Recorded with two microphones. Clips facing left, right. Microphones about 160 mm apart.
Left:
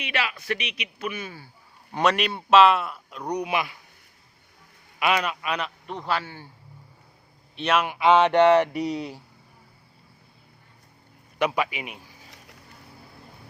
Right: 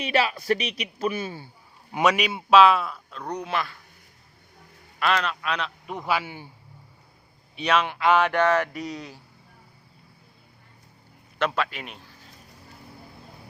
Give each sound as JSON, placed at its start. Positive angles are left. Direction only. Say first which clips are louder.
{"t": 0.0, "sound": "speech", "louder": "right 6 dB", "side_deg": -35}
{"t": 1.9, "sound": "a man's voice", "louder": "right 1 dB", "side_deg": -5}
{"t": 4.9, "sound": "a man's voice", "louder": "left 1 dB", "side_deg": 10}
{"t": 5.8, "sound": "a man's voice", "louder": "right 1 dB", "side_deg": -5}
{"t": 7.5, "sound": "speech", "louder": "even", "side_deg": 0}
{"t": 11.3, "sound": "a man's voice", "louder": "left 1 dB", "side_deg": 10}